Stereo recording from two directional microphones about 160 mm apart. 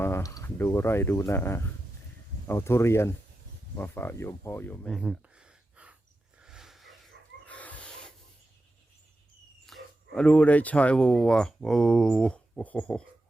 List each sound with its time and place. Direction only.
0.0 s speech: 15° left (ahead or behind)
4.9 s a sound: 5° right (ahead or behind)
9.6 s speech: 5° left (ahead or behind)